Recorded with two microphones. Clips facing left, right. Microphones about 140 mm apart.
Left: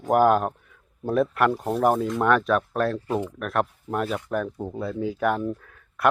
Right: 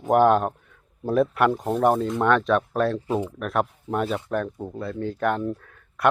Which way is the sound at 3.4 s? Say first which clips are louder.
Right 1 dB; centre (ahead or behind).